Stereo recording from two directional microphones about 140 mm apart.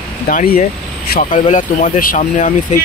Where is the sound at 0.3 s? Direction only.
85° left.